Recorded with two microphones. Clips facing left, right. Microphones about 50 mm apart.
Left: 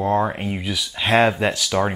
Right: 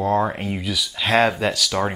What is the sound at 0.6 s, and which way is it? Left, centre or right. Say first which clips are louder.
Speech: even; centre.